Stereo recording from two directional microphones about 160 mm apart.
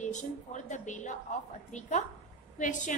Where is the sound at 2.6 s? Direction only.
50° left (ahead or behind).